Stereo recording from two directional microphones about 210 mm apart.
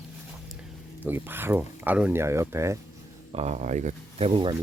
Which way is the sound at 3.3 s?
30° right (ahead or behind).